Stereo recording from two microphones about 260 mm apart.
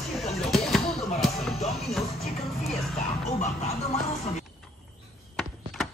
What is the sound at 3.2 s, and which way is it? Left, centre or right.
Music, left.